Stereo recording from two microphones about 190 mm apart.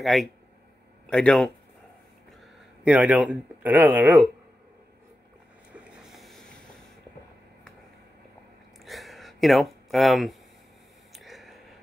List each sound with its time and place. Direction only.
0.0 s speech: centre (ahead or behind)
2.8 s speech: 5° right (ahead or behind)
5.7 s boat: 5° right (ahead or behind)
8.8 s a sound: centre (ahead or behind)